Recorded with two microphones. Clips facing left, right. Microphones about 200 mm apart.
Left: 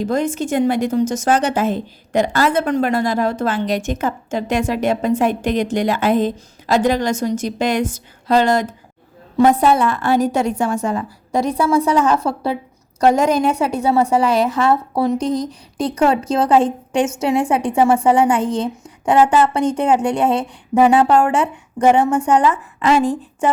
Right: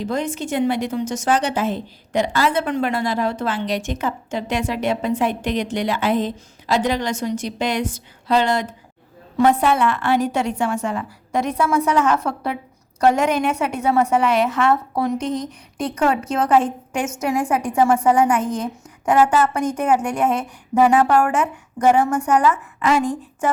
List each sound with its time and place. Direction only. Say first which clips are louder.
0.0 s a woman's voice: left 5 dB; 45° left (ahead or behind)